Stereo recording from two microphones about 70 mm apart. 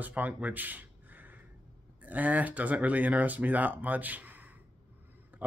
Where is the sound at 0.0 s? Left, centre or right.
Right.